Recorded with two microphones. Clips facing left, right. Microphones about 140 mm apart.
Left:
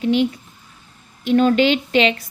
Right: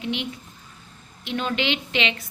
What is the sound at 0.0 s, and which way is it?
A woman's voice, 40° left (ahead or behind).